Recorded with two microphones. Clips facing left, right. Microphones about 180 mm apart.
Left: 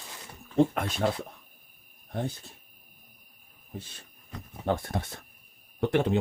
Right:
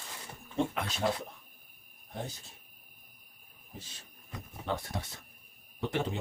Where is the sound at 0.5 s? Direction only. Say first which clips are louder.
Left 8 dB; 45° left (ahead or behind).